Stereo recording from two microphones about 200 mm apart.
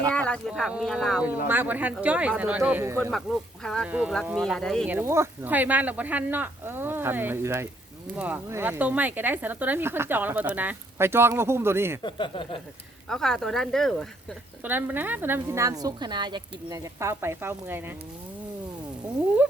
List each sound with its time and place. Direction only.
0.1 s speech: 5° left (ahead or behind); by 3.1 s 10° right (ahead or behind)
3.1 s speech: centre (ahead or behind)
4.9 s speech: 10° right (ahead or behind)
12.0 s speech: 25° left (ahead or behind)
13.1 s speech: centre (ahead or behind)
14.6 s speech: 10° right (ahead or behind)